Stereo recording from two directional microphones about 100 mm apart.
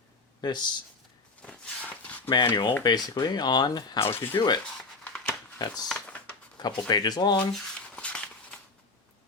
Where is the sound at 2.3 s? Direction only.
45° left (ahead or behind).